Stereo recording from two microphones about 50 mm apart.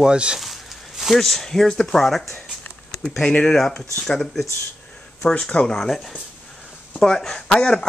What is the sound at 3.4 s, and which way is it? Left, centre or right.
Speech, centre.